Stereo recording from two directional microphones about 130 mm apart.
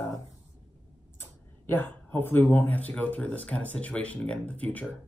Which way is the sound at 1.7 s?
15° left (ahead or behind).